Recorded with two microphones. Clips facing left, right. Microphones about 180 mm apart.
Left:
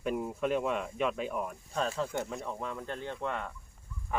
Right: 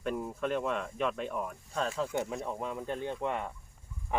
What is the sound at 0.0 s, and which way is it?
Speech, 5° left (ahead or behind).